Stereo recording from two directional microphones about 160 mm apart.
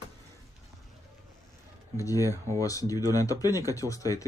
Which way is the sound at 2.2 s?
15° right (ahead or behind).